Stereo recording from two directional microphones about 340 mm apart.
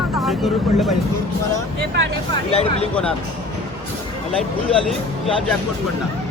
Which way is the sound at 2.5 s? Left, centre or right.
Centre.